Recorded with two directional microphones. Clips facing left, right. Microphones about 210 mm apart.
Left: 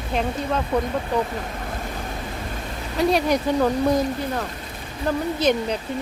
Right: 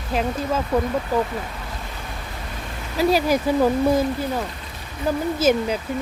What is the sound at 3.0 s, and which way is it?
A woman's voice, 5° right (ahead or behind).